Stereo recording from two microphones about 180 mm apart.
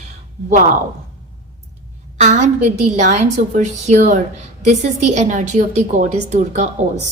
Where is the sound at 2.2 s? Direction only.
40° right (ahead or behind).